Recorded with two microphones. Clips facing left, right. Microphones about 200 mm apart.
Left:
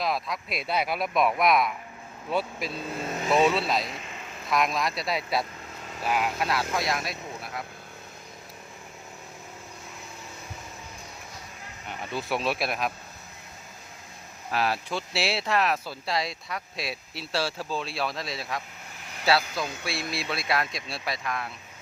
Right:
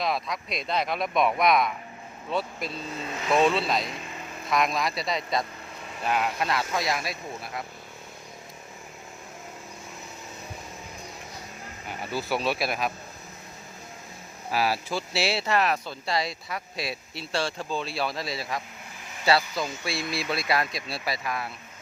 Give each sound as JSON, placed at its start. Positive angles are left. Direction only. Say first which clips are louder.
{"t": 0.0, "sound": "speech", "louder": "even", "side_deg": 0}
{"t": 3.0, "sound": "speech", "louder": "left 4 dB", "side_deg": 45}
{"t": 3.2, "sound": "speech", "louder": "even", "side_deg": 5}
{"t": 11.9, "sound": "speech", "louder": "right 1 dB", "side_deg": -5}
{"t": 14.5, "sound": "speech", "louder": "right 1 dB", "side_deg": -5}